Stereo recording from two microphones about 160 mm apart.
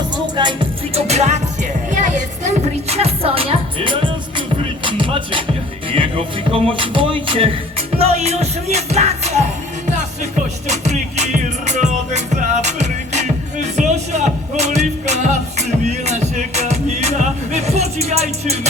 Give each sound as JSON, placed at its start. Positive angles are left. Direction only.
{"t": 0.3, "sound": "speech", "side_deg": -30}
{"t": 2.9, "sound": "speech", "side_deg": -40}
{"t": 7.9, "sound": "music", "side_deg": -40}
{"t": 10.7, "sound": "music", "side_deg": -45}